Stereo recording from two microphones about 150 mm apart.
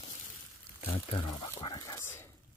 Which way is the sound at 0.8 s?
35° left (ahead or behind).